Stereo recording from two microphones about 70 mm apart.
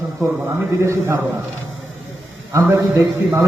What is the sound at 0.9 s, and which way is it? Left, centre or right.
Speech, right.